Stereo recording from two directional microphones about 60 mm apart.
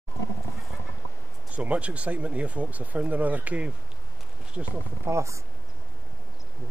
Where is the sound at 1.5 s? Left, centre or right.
Right.